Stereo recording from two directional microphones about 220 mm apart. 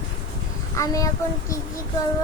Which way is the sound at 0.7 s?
15° left (ahead or behind).